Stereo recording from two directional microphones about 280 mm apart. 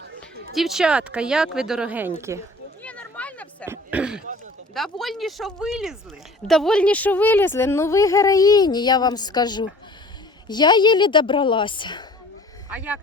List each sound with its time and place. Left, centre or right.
0.5 s speech: centre
2.8 s a sound: centre
4.7 s speech: centre
12.7 s speech: centre